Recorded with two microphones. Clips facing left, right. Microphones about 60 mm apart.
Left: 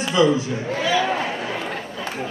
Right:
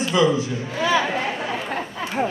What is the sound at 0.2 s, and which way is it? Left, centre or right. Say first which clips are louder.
Speech: left 3 dB; right.